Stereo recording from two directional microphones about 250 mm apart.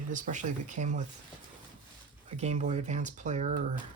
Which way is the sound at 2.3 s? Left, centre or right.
Right.